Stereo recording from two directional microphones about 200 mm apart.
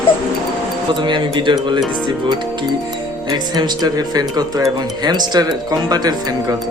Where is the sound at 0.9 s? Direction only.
25° right (ahead or behind).